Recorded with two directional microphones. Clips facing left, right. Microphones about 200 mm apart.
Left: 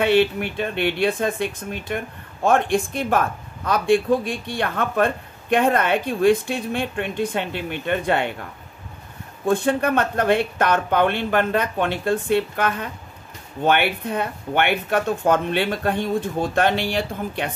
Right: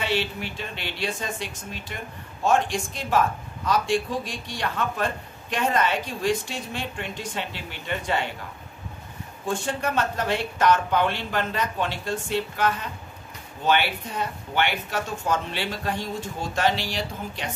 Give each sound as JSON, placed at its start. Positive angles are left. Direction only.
{"t": 0.0, "sound": "speech", "side_deg": 55}
{"t": 9.5, "sound": "speech", "side_deg": 55}